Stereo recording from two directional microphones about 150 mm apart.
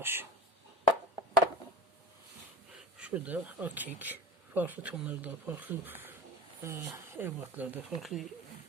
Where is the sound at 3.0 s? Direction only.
10° right (ahead or behind).